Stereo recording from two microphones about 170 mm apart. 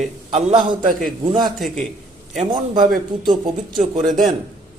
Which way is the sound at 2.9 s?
Centre (ahead or behind).